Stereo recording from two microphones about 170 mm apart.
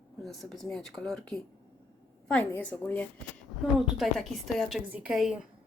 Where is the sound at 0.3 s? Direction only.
Centre (ahead or behind).